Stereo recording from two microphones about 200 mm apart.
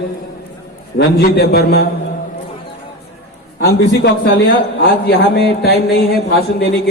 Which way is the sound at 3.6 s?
60° left (ahead or behind).